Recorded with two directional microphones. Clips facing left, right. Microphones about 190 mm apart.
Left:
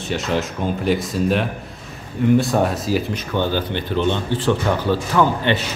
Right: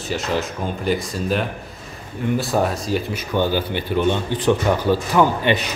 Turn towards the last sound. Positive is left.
turn(degrees=-15)  # may be behind; listen again after turning